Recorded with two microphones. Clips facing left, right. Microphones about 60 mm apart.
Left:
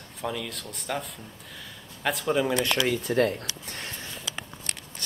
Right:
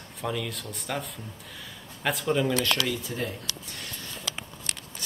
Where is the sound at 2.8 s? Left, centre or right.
Left.